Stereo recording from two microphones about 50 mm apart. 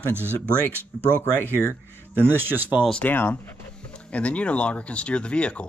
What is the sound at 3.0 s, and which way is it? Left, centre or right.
Speech, left.